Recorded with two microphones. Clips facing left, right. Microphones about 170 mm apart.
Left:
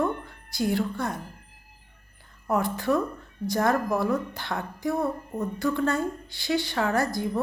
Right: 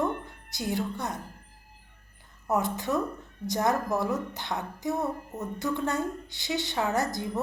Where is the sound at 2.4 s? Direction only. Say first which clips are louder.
Left 2 dB; 20° right (ahead or behind).